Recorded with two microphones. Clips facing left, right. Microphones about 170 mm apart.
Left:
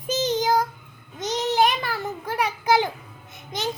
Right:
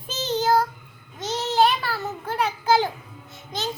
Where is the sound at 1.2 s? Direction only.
15° left (ahead or behind).